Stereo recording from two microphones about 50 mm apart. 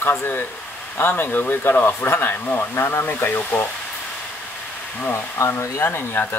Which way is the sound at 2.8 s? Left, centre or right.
Left.